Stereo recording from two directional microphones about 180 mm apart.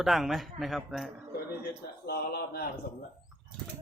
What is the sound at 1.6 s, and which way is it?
A man's voice, 60° left (ahead or behind).